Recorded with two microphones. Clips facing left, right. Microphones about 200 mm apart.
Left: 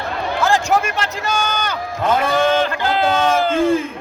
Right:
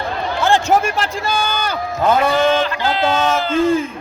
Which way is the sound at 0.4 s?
30° right (ahead or behind).